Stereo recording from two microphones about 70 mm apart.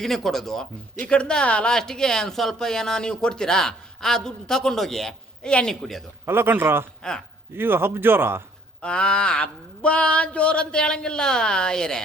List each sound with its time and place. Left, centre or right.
0.0 s speech: centre
5.8 s a man's voice: centre
6.2 s speech: right
7.0 s speech: centre
7.5 s speech: right
8.8 s speech: centre